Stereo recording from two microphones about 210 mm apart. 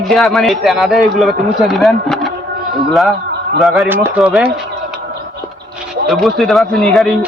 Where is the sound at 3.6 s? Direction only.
Centre (ahead or behind).